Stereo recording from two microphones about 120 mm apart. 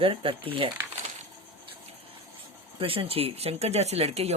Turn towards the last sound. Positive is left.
turn(degrees=-60)  # may be behind; listen again after turning